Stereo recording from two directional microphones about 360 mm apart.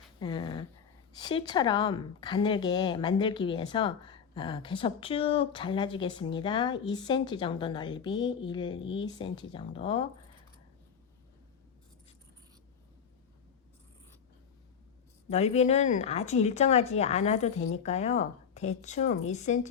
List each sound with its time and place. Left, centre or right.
0.2 s speech: centre
15.3 s speech: centre